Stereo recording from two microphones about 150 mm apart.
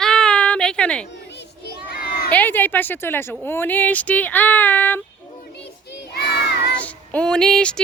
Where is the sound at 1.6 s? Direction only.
90° left.